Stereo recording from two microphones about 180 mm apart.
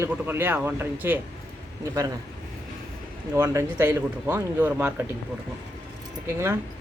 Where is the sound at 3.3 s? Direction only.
15° right (ahead or behind).